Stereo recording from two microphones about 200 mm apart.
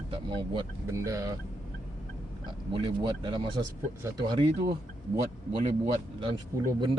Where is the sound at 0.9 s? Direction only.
15° right (ahead or behind).